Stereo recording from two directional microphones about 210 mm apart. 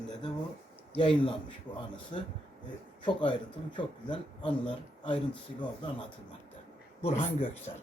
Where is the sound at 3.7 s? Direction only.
25° left (ahead or behind).